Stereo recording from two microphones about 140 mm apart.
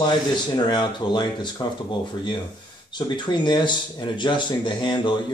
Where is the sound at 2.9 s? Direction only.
30° left (ahead or behind).